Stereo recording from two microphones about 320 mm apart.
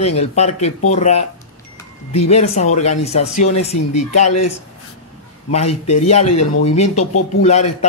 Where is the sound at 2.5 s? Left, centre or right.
Left.